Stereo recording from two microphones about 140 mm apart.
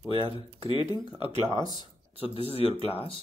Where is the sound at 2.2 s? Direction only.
45° left (ahead or behind).